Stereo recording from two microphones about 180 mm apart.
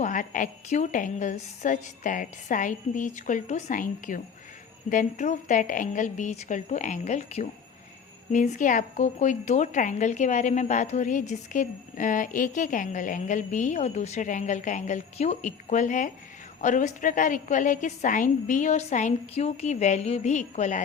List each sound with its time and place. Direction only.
0.0 s a woman's voice: 45° left (ahead or behind)